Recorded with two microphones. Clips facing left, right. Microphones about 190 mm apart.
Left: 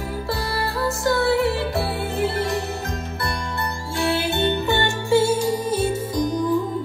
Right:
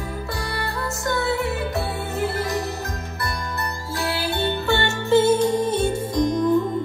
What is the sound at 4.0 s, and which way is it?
Music, 25° left (ahead or behind).